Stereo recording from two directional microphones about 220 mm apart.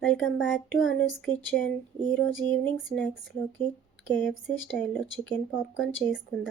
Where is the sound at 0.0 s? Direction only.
Centre (ahead or behind).